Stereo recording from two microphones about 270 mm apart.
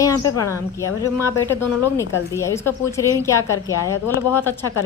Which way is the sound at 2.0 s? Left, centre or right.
Centre.